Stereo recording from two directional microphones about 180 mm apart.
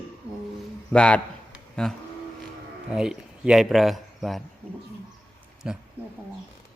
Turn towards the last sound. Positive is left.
turn(degrees=-5)  # may be behind; listen again after turning